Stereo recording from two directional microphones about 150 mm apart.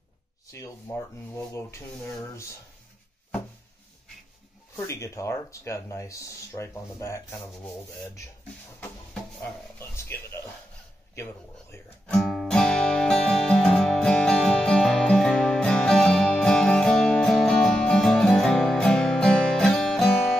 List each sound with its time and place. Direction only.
0.5 s speech: 20° left (ahead or behind)
4.7 s speech: 20° left (ahead or behind)
9.4 s a sound: 15° left (ahead or behind)
11.7 s guitar: 5° left (ahead or behind)